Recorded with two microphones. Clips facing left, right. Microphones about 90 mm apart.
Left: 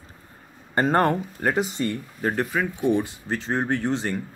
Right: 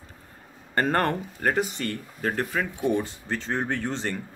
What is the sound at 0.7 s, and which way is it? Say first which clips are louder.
Speech: left 3 dB; 15° left (ahead or behind).